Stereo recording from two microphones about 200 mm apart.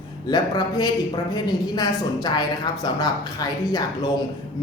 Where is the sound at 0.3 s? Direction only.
20° left (ahead or behind).